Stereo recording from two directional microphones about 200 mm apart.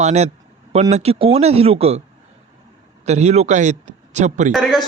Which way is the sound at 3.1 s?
35° right (ahead or behind).